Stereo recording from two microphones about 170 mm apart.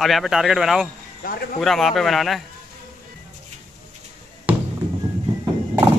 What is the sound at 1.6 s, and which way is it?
Speech, centre (ahead or behind).